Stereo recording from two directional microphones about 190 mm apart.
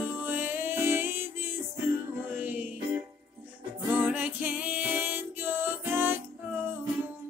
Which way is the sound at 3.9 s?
10° right (ahead or behind).